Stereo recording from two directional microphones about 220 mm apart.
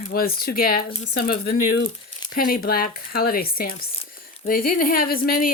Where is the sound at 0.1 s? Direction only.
45° left (ahead or behind).